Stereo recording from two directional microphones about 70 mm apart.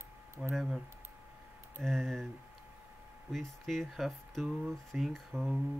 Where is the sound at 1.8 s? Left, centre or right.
Centre.